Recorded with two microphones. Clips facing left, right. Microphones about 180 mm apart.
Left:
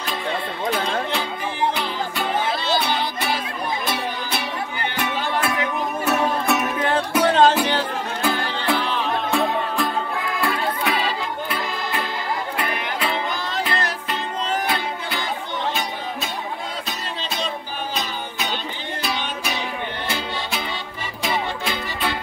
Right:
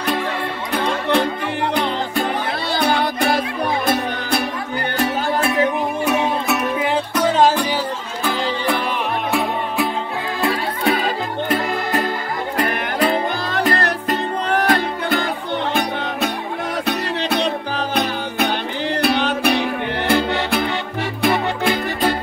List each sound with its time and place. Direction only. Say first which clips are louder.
0.7 s music: right 3 dB; 60° right (ahead or behind)
6.0 s music: even; 5° right (ahead or behind)
9.3 s music: right 1 dB; 5° right (ahead or behind)
10.5 s music: right 3 dB; 40° right (ahead or behind)
16.8 s music: right 9 dB; 65° right (ahead or behind)